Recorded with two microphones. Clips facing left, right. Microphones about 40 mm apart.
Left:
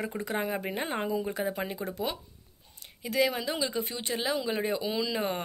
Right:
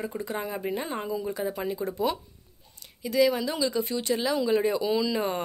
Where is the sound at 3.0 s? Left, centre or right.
Left.